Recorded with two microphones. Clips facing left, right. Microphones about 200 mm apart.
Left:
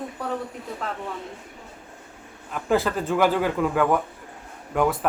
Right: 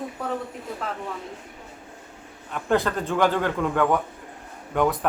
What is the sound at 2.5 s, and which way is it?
Speech, centre (ahead or behind).